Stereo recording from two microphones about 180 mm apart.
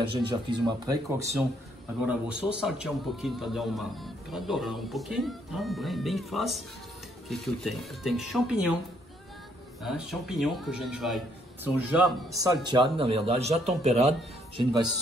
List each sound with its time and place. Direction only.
0.0 s speech: 25° right (ahead or behind)
2.5 s a man's voice: 5° right (ahead or behind)
9.8 s a man's voice: centre (ahead or behind)
12.4 s speech: 20° right (ahead or behind); by 14.1 s 35° right (ahead or behind)